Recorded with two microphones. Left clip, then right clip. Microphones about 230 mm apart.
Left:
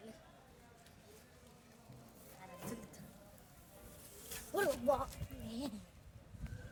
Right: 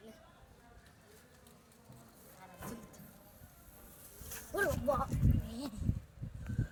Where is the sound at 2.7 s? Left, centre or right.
Centre.